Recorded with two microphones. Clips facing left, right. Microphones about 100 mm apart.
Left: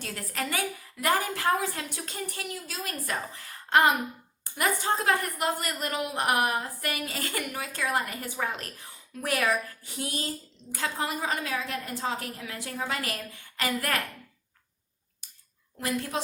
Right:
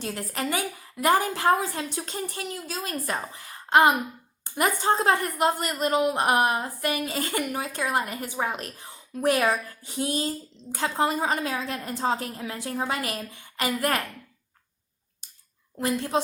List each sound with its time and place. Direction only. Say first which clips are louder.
0.0 s a woman's voice: right 4 dB; 25° right (ahead or behind)
15.8 s a woman's voice: right 5 dB; 30° right (ahead or behind)